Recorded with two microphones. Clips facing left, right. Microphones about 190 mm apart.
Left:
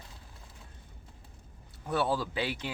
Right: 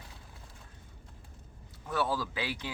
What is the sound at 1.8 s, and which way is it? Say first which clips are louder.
Speech: left 2 dB; 20° left (ahead or behind).